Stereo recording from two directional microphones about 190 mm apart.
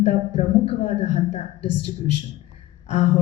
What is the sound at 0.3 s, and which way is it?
Speech, 30° left (ahead or behind).